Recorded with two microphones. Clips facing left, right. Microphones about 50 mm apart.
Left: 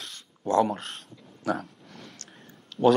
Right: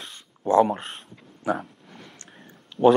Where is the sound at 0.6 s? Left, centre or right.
Centre.